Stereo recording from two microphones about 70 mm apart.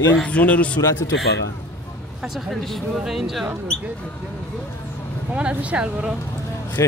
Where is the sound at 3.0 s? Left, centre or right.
Centre.